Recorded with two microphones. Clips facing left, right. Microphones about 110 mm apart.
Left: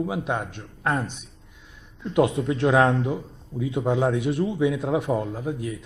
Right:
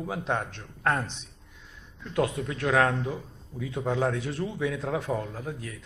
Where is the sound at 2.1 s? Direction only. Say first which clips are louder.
Left 7 dB; 20° left (ahead or behind).